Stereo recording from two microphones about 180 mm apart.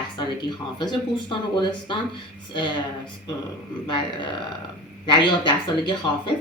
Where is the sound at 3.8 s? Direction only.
25° left (ahead or behind).